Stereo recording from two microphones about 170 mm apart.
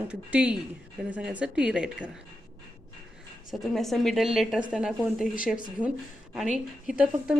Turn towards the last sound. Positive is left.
turn(degrees=-5)  # may be behind; listen again after turning